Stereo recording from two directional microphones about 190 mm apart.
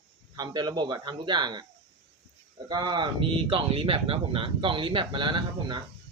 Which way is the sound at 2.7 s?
20° right (ahead or behind).